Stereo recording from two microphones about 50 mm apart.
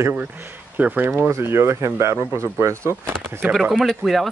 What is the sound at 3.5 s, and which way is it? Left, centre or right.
Speech, centre.